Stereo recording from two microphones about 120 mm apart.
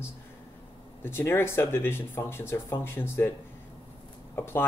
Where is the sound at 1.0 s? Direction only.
20° left (ahead or behind).